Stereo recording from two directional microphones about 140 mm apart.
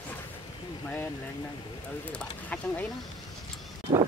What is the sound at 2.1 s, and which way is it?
Speech, 10° left (ahead or behind).